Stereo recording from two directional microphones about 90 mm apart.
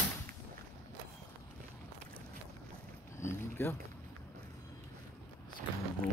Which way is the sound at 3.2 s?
25° left (ahead or behind).